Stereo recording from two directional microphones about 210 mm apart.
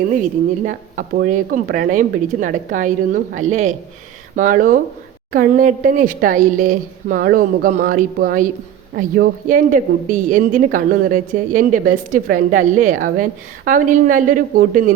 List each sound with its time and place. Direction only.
0.2 s speech: 40° right (ahead or behind)